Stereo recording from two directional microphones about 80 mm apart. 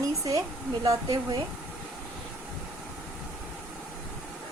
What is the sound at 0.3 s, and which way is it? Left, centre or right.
Speech, right.